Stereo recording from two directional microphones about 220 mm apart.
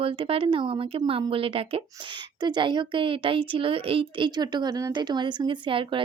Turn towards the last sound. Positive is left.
turn(degrees=-25)  # may be behind; listen again after turning